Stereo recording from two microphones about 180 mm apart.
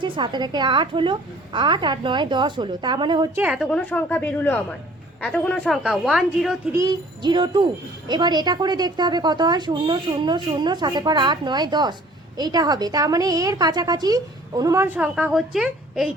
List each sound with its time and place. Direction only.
0.0 s a woman's voice: 25° right (ahead or behind)
3.3 s a woman's voice: 10° right (ahead or behind)
3.7 s a woman's voice: 5° left (ahead or behind)
6.7 s a woman's voice: 20° right (ahead or behind); by 16.0 s centre (ahead or behind)